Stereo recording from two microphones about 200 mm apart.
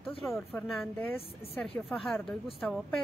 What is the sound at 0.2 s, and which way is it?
Speech, centre (ahead or behind).